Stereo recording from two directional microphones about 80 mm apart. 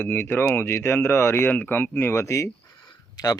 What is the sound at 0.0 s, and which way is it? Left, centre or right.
Speech, left.